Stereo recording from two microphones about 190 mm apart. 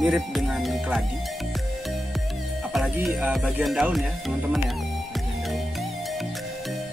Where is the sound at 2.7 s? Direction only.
Centre (ahead or behind).